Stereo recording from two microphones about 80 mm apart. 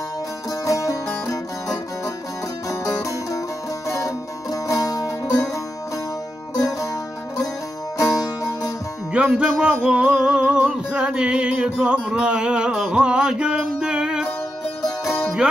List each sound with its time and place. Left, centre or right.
0.7 s music: left
8.0 s music: left
9.1 s music: centre
15.0 s music: left